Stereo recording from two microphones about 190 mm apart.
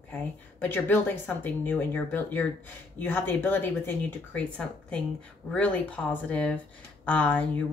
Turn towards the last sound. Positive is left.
turn(degrees=10)  # may be behind; listen again after turning